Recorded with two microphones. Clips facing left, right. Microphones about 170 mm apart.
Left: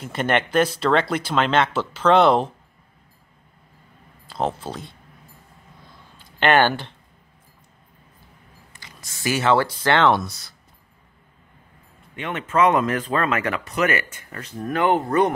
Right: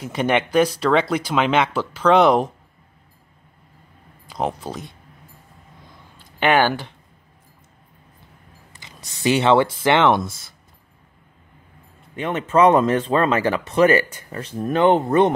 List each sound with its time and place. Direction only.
0.0 s speech: 10° right (ahead or behind)
4.3 s speech: 10° right (ahead or behind)
6.4 s speech: 5° right (ahead or behind)
8.7 s speech: 20° right (ahead or behind)
12.2 s speech: 35° right (ahead or behind)